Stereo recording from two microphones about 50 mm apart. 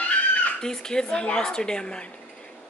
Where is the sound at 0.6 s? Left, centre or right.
Centre.